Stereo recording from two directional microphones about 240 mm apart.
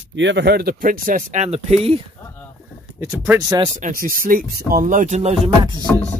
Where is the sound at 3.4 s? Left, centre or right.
Centre.